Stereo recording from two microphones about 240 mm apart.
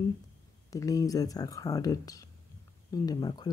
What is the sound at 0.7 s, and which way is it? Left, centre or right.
Speech, centre.